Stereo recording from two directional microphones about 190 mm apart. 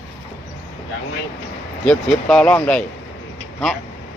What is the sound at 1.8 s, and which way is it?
Speech, 5° left (ahead or behind).